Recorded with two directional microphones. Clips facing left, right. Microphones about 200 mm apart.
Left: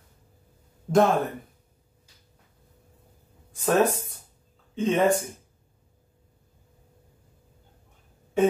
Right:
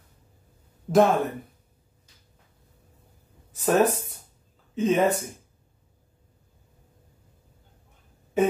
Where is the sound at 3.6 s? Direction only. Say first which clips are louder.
Right 1 dB; 10° right (ahead or behind).